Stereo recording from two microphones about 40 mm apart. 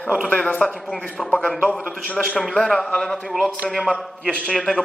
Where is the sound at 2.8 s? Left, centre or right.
Centre.